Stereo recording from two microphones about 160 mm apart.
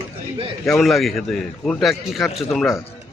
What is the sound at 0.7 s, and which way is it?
A man's voice, centre (ahead or behind).